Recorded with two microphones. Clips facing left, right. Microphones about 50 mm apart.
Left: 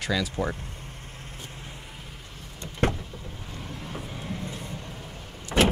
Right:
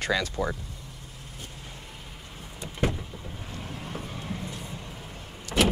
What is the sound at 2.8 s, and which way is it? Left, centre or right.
Vehicle, left.